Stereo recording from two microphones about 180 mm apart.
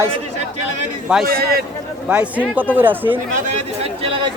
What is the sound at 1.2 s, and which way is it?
Speech, 60° right (ahead or behind).